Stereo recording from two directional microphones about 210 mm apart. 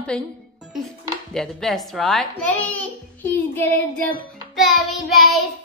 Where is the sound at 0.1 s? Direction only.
5° left (ahead or behind).